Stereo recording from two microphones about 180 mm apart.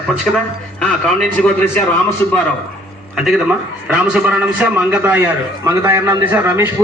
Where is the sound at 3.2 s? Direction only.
5° right (ahead or behind).